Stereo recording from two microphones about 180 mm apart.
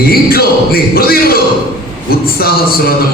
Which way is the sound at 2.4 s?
55° left (ahead or behind).